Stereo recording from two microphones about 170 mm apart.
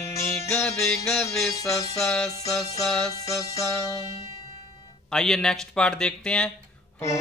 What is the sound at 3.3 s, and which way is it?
Music, 20° left (ahead or behind).